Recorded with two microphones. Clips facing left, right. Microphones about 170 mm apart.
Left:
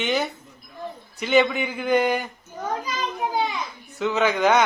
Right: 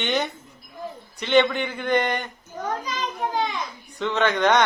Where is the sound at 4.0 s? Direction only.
5° left (ahead or behind).